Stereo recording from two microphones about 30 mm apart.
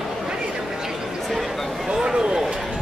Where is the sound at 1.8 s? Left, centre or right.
Right.